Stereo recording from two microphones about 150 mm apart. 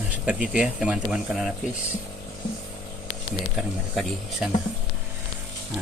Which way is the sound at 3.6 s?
5° right (ahead or behind).